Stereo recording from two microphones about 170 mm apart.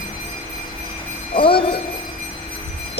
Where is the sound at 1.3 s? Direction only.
30° left (ahead or behind).